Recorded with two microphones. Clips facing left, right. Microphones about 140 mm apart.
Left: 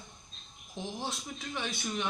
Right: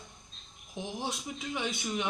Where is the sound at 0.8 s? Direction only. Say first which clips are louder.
Right 2 dB; 15° right (ahead or behind).